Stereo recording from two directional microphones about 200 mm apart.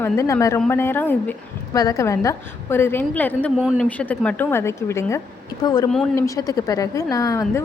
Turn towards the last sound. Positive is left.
turn(degrees=15)  # may be behind; listen again after turning